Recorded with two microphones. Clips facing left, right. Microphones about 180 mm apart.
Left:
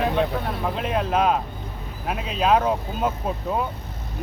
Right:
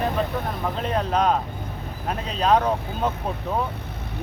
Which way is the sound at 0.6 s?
5° left (ahead or behind).